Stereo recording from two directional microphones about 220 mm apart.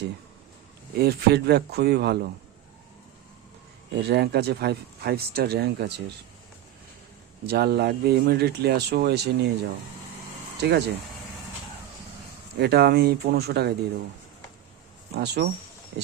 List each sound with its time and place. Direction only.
0.9 s speech: 45° right (ahead or behind)
3.9 s speech: 50° right (ahead or behind)
7.4 s speech: 45° right (ahead or behind)
10.6 s speech: 50° right (ahead or behind)
12.5 s speech: 50° right (ahead or behind)
15.1 s speech: 50° right (ahead or behind)